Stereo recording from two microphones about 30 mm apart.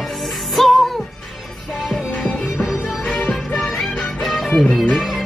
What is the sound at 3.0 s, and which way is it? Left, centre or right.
Music, left.